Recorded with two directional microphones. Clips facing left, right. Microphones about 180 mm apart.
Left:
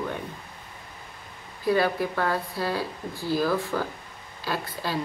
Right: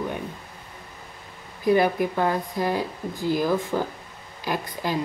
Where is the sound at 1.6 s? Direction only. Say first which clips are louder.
Right 3 dB; 20° right (ahead or behind).